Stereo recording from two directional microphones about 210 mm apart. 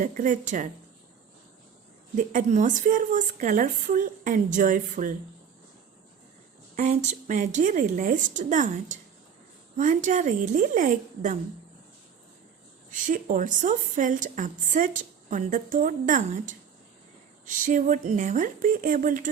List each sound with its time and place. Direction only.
0.0 s a woman's voice: 40° right (ahead or behind)
2.1 s a woman's voice: 35° right (ahead or behind)
6.7 s a woman's voice: 35° right (ahead or behind)
12.9 s a woman's voice: 40° right (ahead or behind)